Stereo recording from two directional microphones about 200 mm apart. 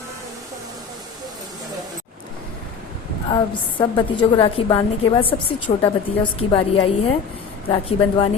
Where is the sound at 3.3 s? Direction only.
25° left (ahead or behind).